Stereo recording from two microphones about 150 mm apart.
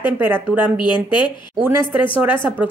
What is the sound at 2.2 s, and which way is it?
Speech, 10° right (ahead or behind).